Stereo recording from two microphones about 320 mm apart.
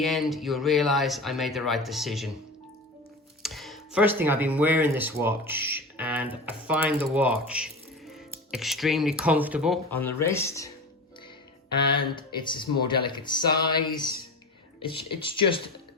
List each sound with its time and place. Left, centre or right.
0.0 s speech: centre
3.4 s speech: centre
11.9 s speech: centre
15.2 s speech: centre